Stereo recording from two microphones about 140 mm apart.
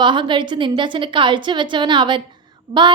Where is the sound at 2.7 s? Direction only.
55° right (ahead or behind).